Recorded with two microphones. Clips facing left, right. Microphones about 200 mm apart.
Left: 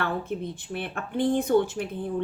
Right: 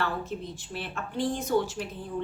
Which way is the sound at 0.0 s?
55° left (ahead or behind).